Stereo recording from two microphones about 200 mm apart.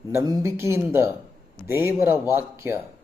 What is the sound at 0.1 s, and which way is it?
Speech, 15° right (ahead or behind).